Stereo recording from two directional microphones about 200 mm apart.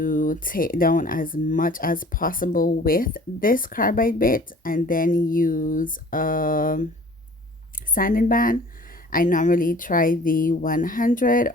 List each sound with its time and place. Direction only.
0.0 s speech: 45° left (ahead or behind)
7.9 s speech: 45° left (ahead or behind)